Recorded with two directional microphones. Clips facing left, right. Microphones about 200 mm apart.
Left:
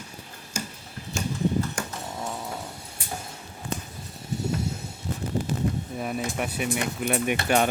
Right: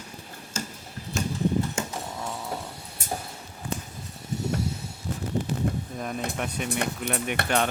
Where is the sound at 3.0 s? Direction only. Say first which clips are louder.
Right 4 dB; 45° right (ahead or behind).